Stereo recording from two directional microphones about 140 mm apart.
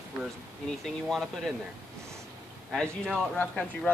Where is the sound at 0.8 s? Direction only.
Centre (ahead or behind).